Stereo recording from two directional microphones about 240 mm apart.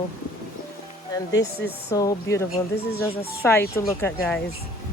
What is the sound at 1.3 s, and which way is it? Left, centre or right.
Speech, left.